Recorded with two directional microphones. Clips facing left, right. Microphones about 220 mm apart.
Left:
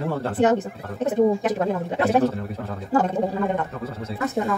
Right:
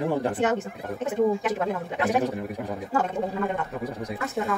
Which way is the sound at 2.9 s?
35° left (ahead or behind).